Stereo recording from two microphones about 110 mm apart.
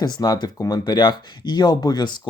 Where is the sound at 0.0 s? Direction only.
40° left (ahead or behind).